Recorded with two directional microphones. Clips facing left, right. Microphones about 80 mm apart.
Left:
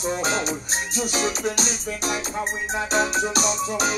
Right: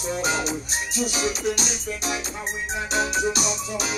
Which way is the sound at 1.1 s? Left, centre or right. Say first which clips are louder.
Left 1 dB; left.